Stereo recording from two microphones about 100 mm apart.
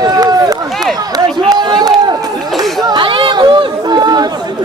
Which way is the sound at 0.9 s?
40° right (ahead or behind).